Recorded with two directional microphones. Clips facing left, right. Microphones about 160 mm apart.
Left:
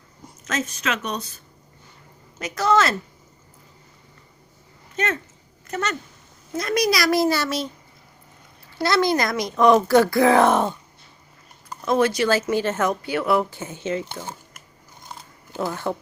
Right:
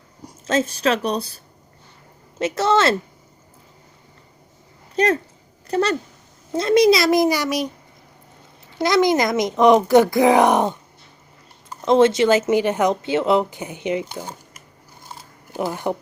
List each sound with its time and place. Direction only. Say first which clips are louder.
0.4 s speech: right 7 dB; 30° right (ahead or behind)
2.4 s speech: right 2 dB; 25° right (ahead or behind)
4.9 s speech: right 7 dB; 35° right (ahead or behind); by 7.7 s 15° right (ahead or behind)
8.8 s speech: right 3 dB; 15° right (ahead or behind)
11.9 s speech: right 5 dB; 25° right (ahead or behind)
15.5 s speech: right 2 dB; 15° right (ahead or behind)